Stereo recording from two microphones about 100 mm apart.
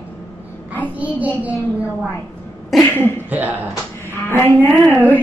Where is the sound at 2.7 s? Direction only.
Centre (ahead or behind).